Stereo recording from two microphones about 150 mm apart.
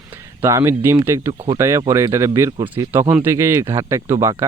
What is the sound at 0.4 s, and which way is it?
Speech, 20° right (ahead or behind).